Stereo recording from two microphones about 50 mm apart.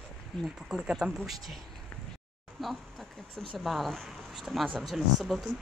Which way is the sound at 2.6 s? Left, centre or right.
Centre.